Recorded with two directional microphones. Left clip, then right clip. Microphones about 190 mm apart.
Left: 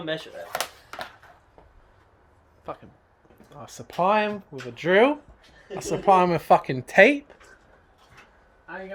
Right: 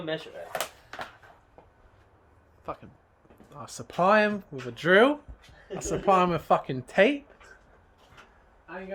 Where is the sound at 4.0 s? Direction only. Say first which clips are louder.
Even; 20° right (ahead or behind).